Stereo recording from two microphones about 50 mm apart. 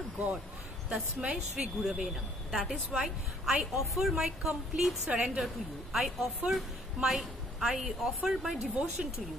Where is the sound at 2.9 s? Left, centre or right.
Centre.